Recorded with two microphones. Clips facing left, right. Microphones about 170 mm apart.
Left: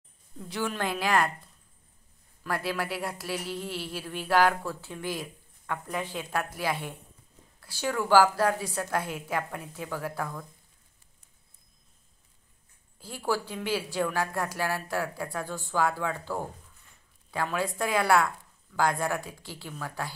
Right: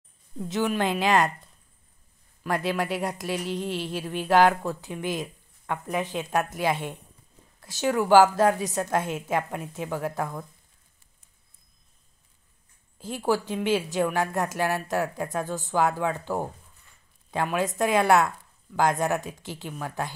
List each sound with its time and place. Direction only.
0.5 s a woman's voice: 20° right (ahead or behind)
2.4 s a woman's voice: 20° right (ahead or behind)
12.9 s a woman's voice: 20° right (ahead or behind)